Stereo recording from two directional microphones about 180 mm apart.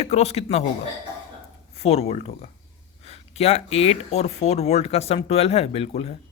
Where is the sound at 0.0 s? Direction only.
35° left (ahead or behind).